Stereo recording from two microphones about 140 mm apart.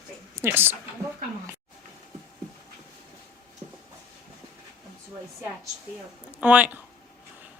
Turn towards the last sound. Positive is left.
turn(degrees=-10)  # may be behind; listen again after turning